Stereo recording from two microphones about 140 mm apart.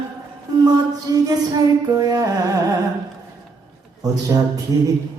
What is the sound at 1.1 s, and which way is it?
Music, 25° right (ahead or behind).